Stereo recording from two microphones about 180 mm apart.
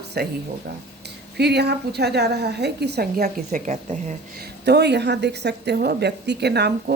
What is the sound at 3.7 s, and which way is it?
Speech, 40° right (ahead or behind).